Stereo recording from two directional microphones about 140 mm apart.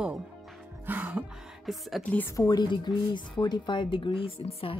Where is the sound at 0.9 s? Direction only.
10° right (ahead or behind).